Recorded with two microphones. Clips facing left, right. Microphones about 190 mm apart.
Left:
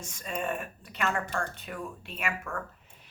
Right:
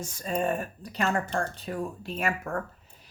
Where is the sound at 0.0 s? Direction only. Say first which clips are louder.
Right 6 dB; 35° right (ahead or behind).